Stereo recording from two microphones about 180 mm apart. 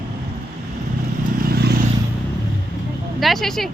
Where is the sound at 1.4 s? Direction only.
60° right (ahead or behind).